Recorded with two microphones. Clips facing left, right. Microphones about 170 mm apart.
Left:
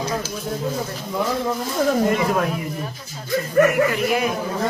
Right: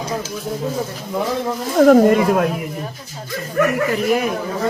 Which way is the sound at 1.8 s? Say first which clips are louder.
Right 9 dB; 55° right (ahead or behind).